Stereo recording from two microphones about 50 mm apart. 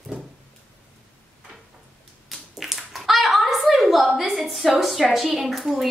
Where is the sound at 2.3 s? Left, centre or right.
Centre.